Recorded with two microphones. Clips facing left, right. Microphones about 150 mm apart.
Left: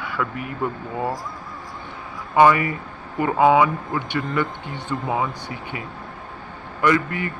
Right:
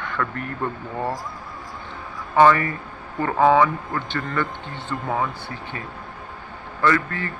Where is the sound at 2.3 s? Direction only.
15° left (ahead or behind).